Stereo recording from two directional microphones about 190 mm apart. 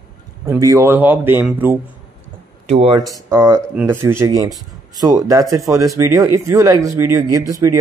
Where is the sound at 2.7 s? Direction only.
30° right (ahead or behind).